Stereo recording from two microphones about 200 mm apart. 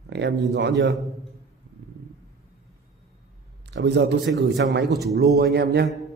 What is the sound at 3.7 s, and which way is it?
A man's voice, 60° right (ahead or behind).